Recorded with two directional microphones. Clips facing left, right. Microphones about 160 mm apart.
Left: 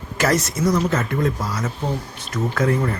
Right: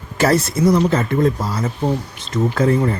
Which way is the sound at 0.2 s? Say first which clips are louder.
Right 4 dB; 30° right (ahead or behind).